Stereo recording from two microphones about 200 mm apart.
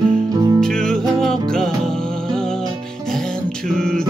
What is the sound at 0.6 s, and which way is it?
Music, 5° left (ahead or behind).